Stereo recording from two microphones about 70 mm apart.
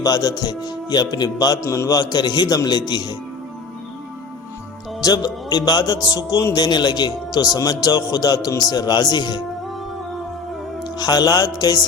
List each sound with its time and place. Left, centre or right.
0.0 s a man's voice: left
1.6 s a man's voice: left
1.9 s speech: left
4.9 s a man's voice: left
6.5 s a man's voice: left
8.7 s speech: left
10.9 s a man's voice: left